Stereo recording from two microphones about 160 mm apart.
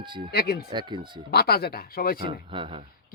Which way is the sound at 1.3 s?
80° left.